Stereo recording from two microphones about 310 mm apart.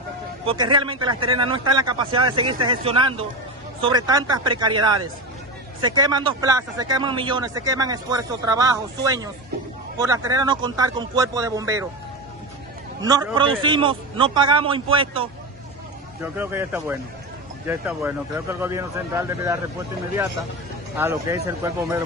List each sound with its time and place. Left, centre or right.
0.5 s speech: centre
13.0 s speech: centre
21.0 s speech: centre